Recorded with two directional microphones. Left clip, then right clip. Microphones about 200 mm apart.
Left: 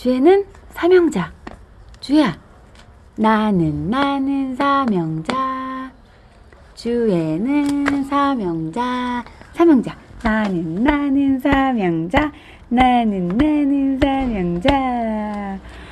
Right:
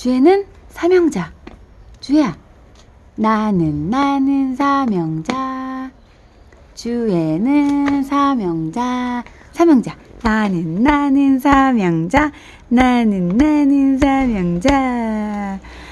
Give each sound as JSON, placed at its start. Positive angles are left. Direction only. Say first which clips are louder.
{"t": 0.0, "sound": "a woman's voice", "louder": "right 1 dB", "side_deg": -5}
{"t": 5.4, "sound": "a sound", "louder": "left 1 dB", "side_deg": -10}
{"t": 6.8, "sound": "a woman's voice", "louder": "even", "side_deg": -10}
{"t": 10.2, "sound": "a woman's voice", "louder": "right 2 dB", "side_deg": -25}